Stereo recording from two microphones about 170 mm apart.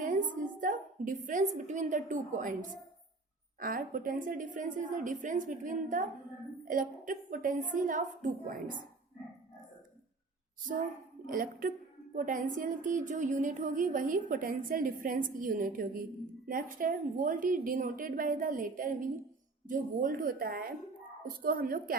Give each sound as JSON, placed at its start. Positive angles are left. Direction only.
{"t": 0.0, "sound": "a woman's voice", "side_deg": -50}
{"t": 11.3, "sound": "a woman's voice", "side_deg": -55}